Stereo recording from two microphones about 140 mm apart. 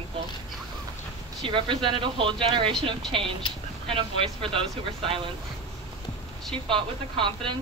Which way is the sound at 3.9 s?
40° right (ahead or behind).